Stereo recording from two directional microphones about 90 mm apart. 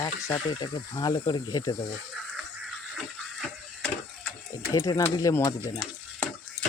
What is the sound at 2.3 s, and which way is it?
Music, centre (ahead or behind).